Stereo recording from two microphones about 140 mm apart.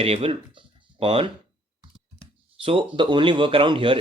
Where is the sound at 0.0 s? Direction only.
45° right (ahead or behind).